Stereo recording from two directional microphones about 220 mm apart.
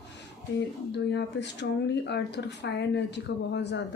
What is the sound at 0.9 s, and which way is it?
Speech, 50° left (ahead or behind).